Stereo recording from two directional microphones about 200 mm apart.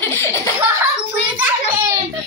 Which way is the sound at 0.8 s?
10° right (ahead or behind).